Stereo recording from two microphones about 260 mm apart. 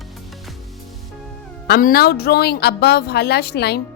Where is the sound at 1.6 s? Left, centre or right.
Left.